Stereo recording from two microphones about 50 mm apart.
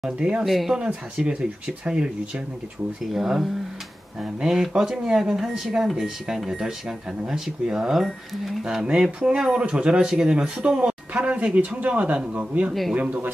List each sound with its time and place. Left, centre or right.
0.0 s speech: centre
0.5 s speech: centre
1.1 s speech: centre